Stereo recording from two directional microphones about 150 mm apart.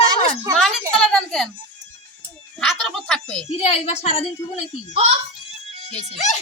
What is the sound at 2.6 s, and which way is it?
Speech, 5° left (ahead or behind).